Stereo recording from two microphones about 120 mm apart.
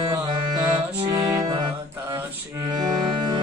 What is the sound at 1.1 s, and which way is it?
Music, 30° right (ahead or behind).